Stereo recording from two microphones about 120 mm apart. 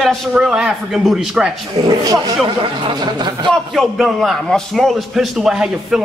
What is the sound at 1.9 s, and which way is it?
Speech, 30° right (ahead or behind).